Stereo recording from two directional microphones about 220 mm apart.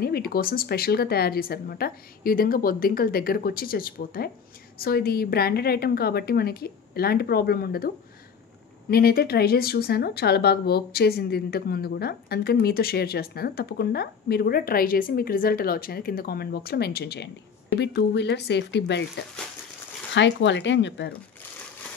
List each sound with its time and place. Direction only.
0.0 s speech: 45° left (ahead or behind)
8.9 s speech: 45° left (ahead or behind)
20.2 s speech: 55° left (ahead or behind)